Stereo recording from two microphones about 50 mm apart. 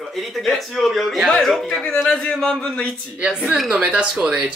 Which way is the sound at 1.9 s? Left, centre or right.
Centre.